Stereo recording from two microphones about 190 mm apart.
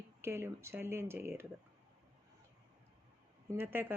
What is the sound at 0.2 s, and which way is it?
Speech, 15° right (ahead or behind).